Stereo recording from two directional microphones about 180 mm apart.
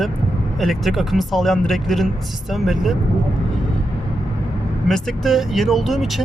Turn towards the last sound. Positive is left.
turn(degrees=0)  # may be behind; listen again after turning